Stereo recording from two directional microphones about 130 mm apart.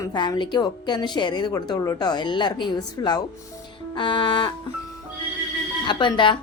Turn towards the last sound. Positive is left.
turn(degrees=40)  # may be behind; listen again after turning